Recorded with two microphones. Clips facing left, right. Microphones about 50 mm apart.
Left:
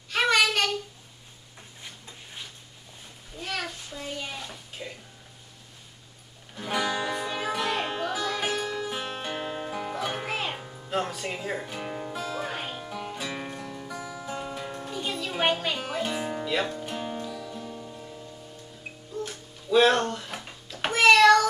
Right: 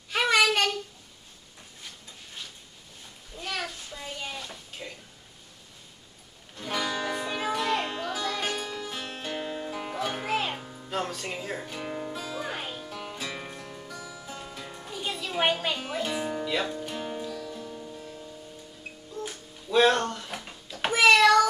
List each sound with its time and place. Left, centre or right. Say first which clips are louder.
0.3 s child singing: right 1 dB; centre
3.3 s bathtub: left 1 dB; centre
6.5 s music: left 2 dB; centre
7.2 s music: even; centre
8.9 s music: left 2 dB; centre
9.8 s music: left 1 dB; centre
12.9 s music: left 4 dB; centre
13.9 s music: left 7 dB; centre
14.9 s music: even; centre
19.9 s a sound: left 1 dB; centre